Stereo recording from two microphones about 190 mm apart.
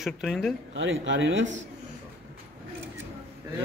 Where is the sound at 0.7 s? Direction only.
80° right.